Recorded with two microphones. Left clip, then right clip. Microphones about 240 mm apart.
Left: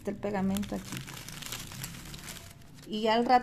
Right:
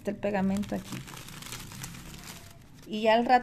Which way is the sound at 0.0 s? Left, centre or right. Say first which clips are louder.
Right 3 dB; centre.